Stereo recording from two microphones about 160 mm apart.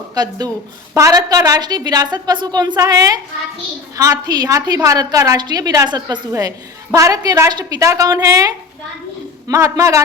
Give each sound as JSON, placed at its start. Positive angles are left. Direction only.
{"t": 0.1, "sound": "a woman's voice", "side_deg": -25}